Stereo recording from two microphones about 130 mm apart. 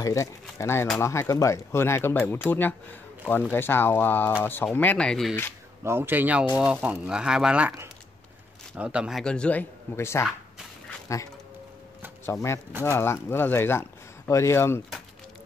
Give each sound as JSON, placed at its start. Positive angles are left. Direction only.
{"t": 0.0, "sound": "speech", "side_deg": 25}
{"t": 5.9, "sound": "speech", "side_deg": -15}
{"t": 8.7, "sound": "speech", "side_deg": -10}
{"t": 9.2, "sound": "speech", "side_deg": 5}
{"t": 12.3, "sound": "speech", "side_deg": 20}